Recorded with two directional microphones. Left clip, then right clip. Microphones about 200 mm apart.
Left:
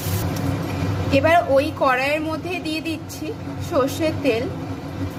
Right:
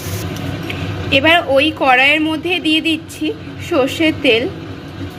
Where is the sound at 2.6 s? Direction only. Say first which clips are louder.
Right 11 dB; 20° left (ahead or behind).